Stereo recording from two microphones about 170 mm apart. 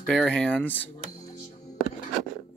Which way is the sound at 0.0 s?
5° left (ahead or behind).